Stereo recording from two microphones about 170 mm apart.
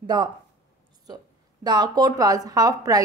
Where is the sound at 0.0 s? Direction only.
25° right (ahead or behind).